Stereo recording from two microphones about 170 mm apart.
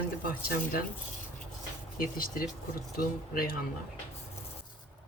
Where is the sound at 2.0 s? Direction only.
60° left (ahead or behind).